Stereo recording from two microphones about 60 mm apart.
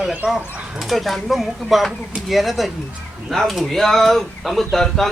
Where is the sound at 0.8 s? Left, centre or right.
Centre.